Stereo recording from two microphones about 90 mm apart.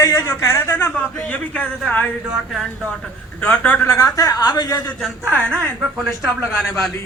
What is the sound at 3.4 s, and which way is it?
Speech, 15° left (ahead or behind).